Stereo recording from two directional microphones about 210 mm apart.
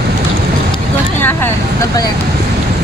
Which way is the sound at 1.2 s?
10° left (ahead or behind).